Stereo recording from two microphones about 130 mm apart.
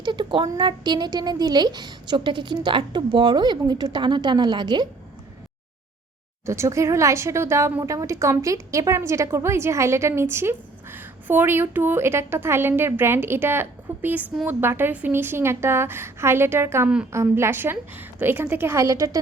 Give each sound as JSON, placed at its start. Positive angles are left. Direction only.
{"t": 0.0, "sound": "a woman's voice", "side_deg": -35}
{"t": 6.4, "sound": "a woman's voice", "side_deg": -20}